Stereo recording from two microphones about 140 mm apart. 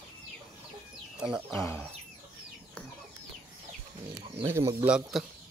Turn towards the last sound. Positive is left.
turn(degrees=0)  # may be behind; listen again after turning